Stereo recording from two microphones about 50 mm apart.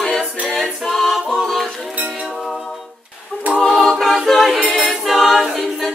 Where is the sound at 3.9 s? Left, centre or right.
Centre.